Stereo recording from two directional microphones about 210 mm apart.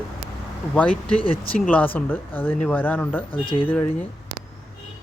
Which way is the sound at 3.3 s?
25° left (ahead or behind).